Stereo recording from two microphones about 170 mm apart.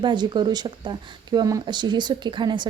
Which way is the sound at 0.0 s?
25° right (ahead or behind).